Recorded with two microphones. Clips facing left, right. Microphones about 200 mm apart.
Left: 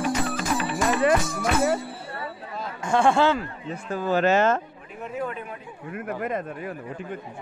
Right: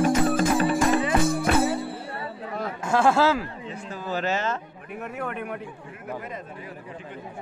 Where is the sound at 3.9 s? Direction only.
55° left (ahead or behind).